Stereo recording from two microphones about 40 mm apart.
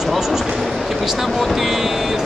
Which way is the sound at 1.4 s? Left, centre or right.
Centre.